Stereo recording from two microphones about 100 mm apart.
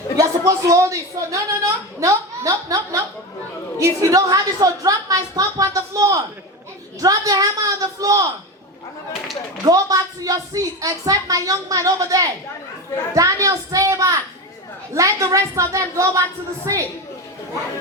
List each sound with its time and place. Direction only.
0.2 s a woman's voice: 35° right (ahead or behind)
9.6 s a woman's voice: 35° right (ahead or behind)